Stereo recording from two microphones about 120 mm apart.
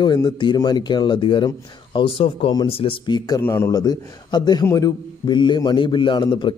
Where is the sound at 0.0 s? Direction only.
40° left (ahead or behind).